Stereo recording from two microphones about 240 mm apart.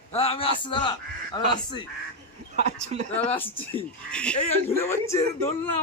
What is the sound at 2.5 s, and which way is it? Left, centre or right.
Speech, right.